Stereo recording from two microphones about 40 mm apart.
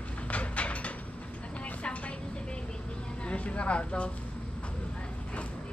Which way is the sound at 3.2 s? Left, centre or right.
Left.